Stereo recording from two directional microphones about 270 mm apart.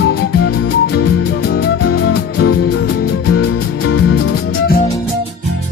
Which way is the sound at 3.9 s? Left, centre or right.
Left.